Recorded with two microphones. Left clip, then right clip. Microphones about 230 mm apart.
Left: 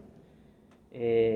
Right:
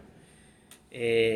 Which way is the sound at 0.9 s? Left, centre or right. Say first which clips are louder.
Right 1 dB; right.